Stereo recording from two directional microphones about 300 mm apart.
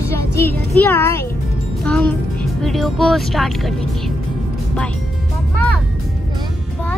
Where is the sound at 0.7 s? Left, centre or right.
Centre.